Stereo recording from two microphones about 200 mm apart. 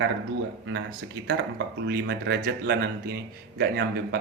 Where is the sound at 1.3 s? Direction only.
60° right (ahead or behind).